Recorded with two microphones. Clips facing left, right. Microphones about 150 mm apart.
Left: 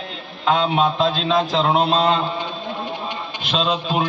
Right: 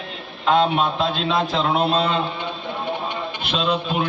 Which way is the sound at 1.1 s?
55° right (ahead or behind).